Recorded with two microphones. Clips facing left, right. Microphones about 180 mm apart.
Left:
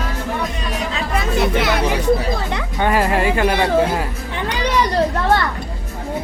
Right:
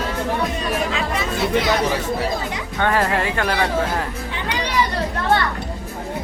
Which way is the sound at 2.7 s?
10° left (ahead or behind).